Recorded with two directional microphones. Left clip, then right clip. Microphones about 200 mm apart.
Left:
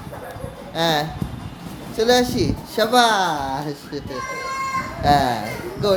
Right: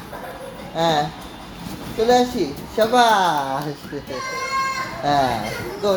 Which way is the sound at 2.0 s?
35° left (ahead or behind).